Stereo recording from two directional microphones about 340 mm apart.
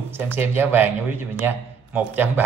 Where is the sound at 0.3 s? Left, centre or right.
Centre.